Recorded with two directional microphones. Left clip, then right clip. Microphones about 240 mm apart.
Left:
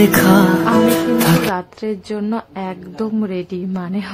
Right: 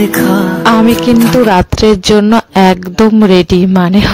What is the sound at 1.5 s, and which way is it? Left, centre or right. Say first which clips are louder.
A woman's voice: right 15 dB; right.